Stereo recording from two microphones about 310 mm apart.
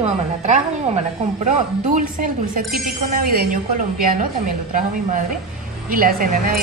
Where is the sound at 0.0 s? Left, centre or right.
Right.